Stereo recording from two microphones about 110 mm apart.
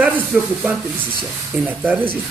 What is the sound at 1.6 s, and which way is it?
Speech, 15° right (ahead or behind).